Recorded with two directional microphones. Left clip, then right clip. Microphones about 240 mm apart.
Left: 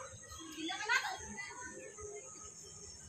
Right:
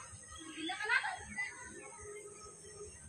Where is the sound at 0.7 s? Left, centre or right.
Left.